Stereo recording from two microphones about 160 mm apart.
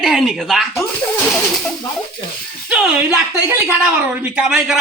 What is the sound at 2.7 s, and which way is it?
Speech, 5° right (ahead or behind).